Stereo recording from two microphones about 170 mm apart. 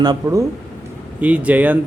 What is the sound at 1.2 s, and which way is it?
Speech, 10° right (ahead or behind).